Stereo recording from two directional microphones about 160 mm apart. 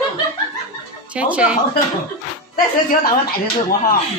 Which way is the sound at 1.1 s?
10° right (ahead or behind).